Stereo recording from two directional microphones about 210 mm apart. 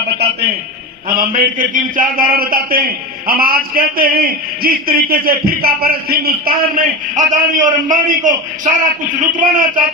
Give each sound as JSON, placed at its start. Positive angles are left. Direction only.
{"t": 1.1, "sound": "a man's voice", "side_deg": -45}